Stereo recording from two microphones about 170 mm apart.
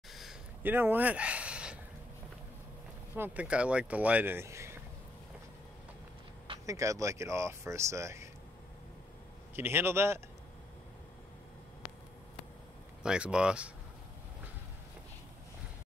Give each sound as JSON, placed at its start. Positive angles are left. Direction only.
{"t": 0.1, "sound": "a sound", "side_deg": 0}
{"t": 0.6, "sound": "a sound", "side_deg": -10}
{"t": 3.2, "sound": "speech", "side_deg": -5}
{"t": 6.6, "sound": "speech", "side_deg": -20}
{"t": 9.6, "sound": "speech", "side_deg": -15}
{"t": 13.0, "sound": "speech", "side_deg": -5}